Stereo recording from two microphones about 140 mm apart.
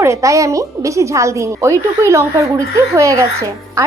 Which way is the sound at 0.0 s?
20° right (ahead or behind).